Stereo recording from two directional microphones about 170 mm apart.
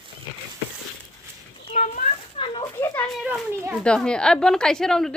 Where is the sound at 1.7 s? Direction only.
50° left (ahead or behind).